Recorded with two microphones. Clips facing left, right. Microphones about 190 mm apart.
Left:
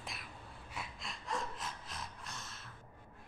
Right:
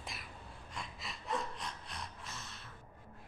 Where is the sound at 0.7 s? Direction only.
Centre (ahead or behind).